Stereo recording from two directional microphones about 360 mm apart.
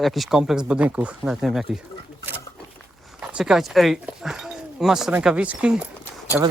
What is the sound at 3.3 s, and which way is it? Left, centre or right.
Speech, centre.